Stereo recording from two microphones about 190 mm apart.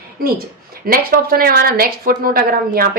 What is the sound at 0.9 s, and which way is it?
Speech, 55° right (ahead or behind).